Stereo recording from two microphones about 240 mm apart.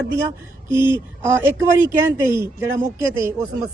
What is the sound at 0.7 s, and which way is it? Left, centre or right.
Mantra, centre.